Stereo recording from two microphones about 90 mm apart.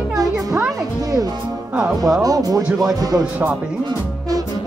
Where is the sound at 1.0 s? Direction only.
45° right (ahead or behind).